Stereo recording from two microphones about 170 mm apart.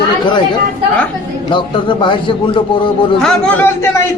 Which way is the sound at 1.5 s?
30° left (ahead or behind).